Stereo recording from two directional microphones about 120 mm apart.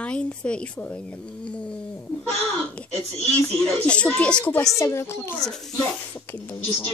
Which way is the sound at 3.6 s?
10° left (ahead or behind).